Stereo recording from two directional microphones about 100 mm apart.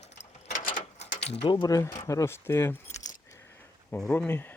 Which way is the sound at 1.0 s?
80° left.